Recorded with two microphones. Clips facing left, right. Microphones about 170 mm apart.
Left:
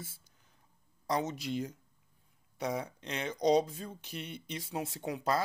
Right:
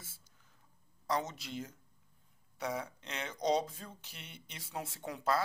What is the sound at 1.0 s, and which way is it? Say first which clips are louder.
Speech: left 3 dB; 15° left (ahead or behind).